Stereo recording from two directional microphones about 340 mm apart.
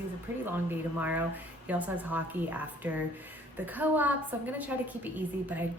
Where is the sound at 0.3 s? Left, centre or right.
Centre.